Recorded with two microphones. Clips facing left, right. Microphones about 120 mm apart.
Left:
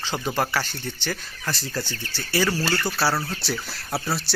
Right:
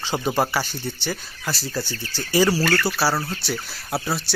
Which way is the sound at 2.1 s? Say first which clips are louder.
Right 5 dB; 15° right (ahead or behind).